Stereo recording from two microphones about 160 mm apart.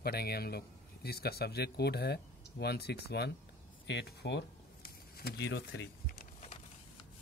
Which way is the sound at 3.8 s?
90° left.